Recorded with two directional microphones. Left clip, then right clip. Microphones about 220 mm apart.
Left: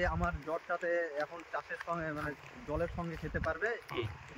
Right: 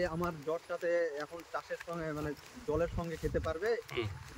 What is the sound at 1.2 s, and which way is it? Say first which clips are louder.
Speech: left 2 dB; 10° left (ahead or behind).